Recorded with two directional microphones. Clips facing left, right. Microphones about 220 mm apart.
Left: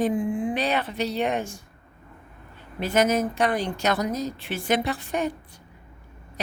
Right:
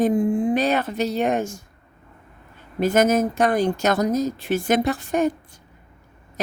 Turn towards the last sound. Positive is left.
turn(degrees=-45)  # may be behind; listen again after turning